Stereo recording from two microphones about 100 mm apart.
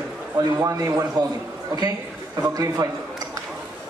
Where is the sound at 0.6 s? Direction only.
35° right (ahead or behind).